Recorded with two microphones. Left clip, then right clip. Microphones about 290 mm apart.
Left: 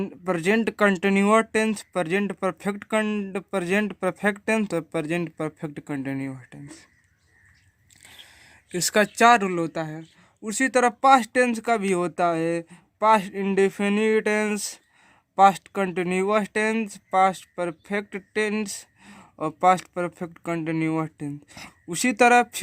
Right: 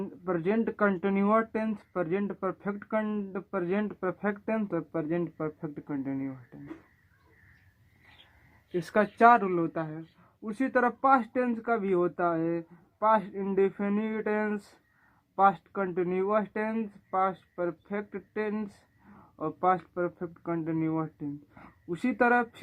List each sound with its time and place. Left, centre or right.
0.0 s speech: left
8.7 s speech: left